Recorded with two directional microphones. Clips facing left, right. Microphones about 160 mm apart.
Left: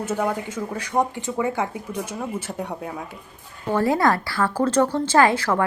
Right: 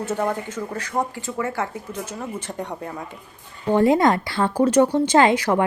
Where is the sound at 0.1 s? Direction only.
10° left (ahead or behind).